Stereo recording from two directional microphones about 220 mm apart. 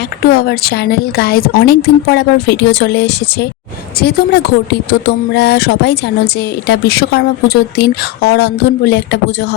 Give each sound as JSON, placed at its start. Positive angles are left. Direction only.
{"t": 0.3, "sound": "speech", "side_deg": 45}